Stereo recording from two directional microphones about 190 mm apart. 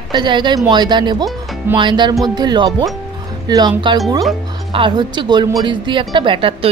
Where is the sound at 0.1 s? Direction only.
25° right (ahead or behind).